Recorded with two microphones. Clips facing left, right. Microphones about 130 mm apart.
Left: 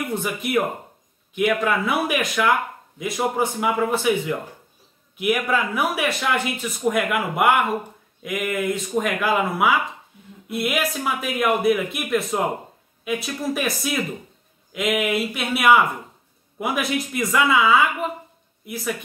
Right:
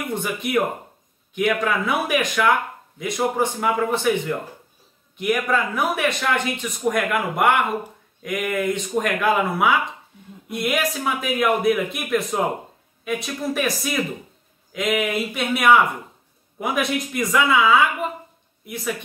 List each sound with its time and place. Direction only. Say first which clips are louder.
0.1 s speech: right 1 dB; centre (ahead or behind)